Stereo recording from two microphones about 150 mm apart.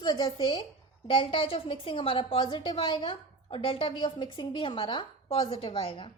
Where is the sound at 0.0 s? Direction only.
25° left (ahead or behind).